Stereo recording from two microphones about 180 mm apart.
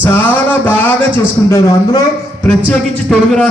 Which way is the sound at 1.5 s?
15° left (ahead or behind).